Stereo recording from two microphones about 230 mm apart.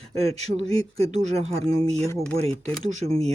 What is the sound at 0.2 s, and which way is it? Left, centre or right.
Speech, right.